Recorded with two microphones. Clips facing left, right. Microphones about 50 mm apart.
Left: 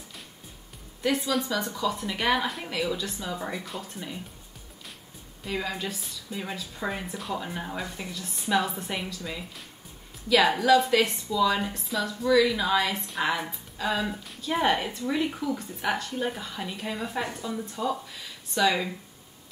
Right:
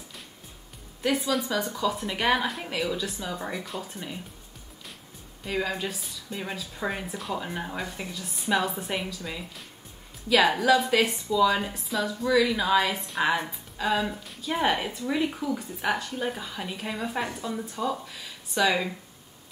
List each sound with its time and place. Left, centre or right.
1.0 s a woman's voice: centre
5.4 s a woman's voice: centre